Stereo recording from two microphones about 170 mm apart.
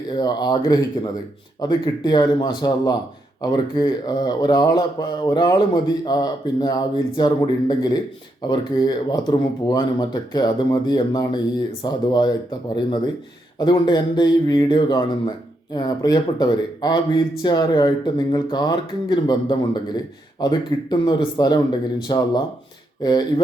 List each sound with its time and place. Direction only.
0.2 s speech: 25° left (ahead or behind)